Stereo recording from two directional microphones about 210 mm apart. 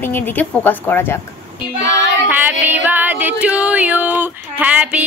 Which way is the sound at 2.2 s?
10° right (ahead or behind).